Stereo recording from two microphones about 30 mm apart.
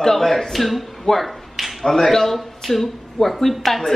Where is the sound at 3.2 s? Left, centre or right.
Centre.